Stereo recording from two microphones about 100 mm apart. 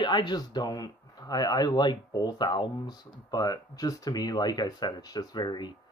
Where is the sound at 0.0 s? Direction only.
50° left (ahead or behind).